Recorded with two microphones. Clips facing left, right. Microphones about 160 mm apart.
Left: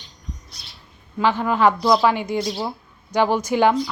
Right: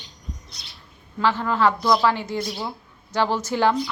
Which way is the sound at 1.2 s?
15° left (ahead or behind).